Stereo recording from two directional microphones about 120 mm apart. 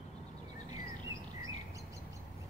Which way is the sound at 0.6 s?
30° right (ahead or behind).